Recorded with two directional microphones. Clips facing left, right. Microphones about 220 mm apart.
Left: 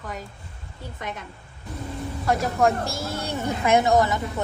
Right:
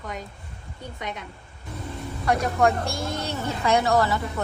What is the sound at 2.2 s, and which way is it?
A woman's voice, centre (ahead or behind).